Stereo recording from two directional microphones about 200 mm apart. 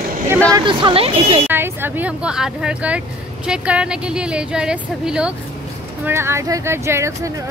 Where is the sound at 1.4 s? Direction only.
10° right (ahead or behind).